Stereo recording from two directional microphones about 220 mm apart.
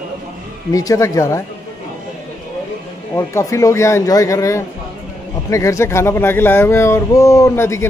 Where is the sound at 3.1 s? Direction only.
15° left (ahead or behind).